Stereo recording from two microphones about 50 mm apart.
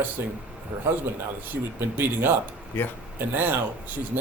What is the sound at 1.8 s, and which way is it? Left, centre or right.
Speech, right.